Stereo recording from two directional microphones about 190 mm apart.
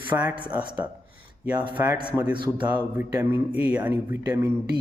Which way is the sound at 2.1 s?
10° right (ahead or behind).